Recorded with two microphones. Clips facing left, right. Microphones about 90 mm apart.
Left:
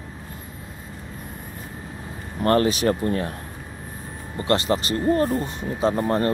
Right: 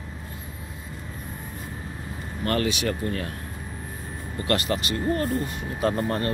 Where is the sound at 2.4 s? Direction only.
35° left (ahead or behind).